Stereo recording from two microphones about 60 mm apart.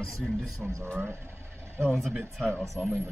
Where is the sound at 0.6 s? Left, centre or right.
Right.